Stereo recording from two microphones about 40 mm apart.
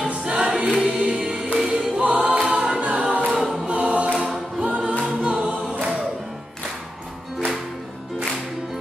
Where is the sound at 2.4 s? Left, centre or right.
Right.